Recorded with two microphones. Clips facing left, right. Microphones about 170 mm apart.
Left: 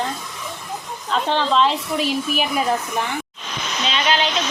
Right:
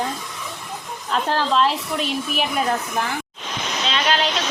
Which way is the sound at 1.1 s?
5° right (ahead or behind).